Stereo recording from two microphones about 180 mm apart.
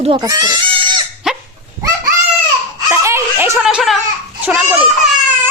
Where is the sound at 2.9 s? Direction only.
15° right (ahead or behind).